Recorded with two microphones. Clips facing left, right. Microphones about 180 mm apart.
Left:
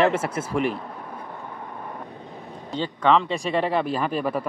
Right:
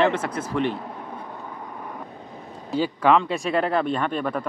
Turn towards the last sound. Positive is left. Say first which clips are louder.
# even
turn(degrees=5)  # may be behind; listen again after turning